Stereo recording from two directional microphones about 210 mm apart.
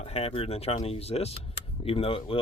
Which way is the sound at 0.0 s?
30° left (ahead or behind).